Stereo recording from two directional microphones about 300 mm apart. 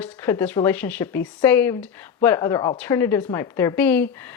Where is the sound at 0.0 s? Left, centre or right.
Centre.